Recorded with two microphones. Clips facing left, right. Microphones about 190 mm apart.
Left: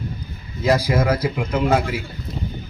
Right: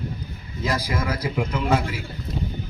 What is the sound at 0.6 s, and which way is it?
Speech, 35° left (ahead or behind).